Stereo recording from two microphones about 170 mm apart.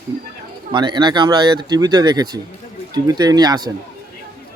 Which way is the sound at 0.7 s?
25° right (ahead or behind).